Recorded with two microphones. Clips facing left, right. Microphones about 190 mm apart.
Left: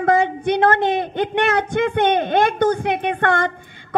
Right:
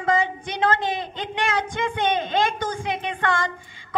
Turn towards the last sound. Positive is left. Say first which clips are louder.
# left 6 dB
turn(degrees=60)  # may be behind; listen again after turning